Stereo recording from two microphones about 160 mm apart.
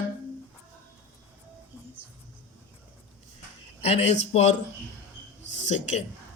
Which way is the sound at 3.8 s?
40° left (ahead or behind).